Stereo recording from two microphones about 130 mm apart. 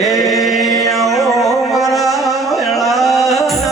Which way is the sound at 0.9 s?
Centre (ahead or behind).